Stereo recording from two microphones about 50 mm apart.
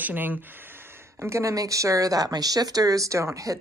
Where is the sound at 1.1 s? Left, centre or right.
Right.